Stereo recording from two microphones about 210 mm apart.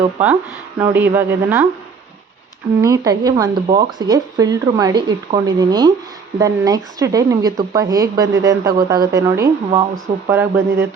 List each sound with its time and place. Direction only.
0.8 s speech: 10° right (ahead or behind)
2.8 s speech: 15° right (ahead or behind)